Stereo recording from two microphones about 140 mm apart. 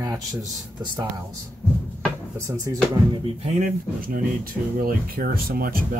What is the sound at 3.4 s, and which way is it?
Speech, 65° right (ahead or behind).